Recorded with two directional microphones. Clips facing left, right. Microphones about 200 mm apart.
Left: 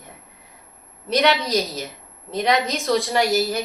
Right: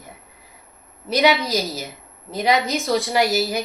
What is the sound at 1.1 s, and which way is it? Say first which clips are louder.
A woman's voice: right 1 dB; 5° right (ahead or behind).